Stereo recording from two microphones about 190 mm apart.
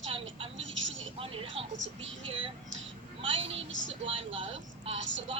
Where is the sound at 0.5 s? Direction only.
85° right.